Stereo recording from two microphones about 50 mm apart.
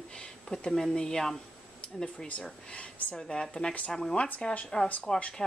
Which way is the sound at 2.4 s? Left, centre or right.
Centre.